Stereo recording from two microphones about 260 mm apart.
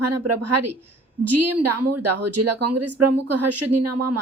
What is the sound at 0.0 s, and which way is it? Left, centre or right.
A woman's voice, right.